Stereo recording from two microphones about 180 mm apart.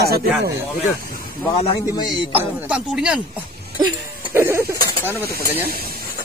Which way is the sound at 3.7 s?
25° right (ahead or behind).